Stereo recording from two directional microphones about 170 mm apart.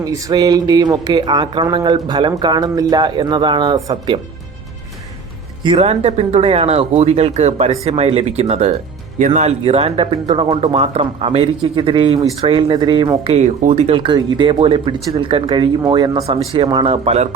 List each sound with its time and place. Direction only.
0.0 s speech: 20° right (ahead or behind)
5.6 s speech: 35° right (ahead or behind)